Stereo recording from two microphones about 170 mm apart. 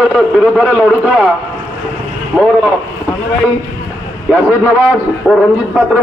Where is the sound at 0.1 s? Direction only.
Centre (ahead or behind).